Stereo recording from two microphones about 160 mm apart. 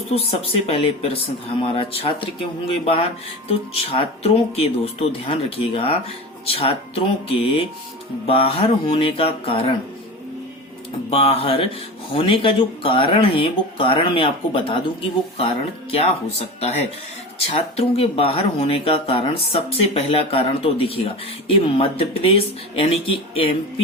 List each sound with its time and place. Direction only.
0.1 s speech: 35° left (ahead or behind)
11.1 s speech: 35° left (ahead or behind)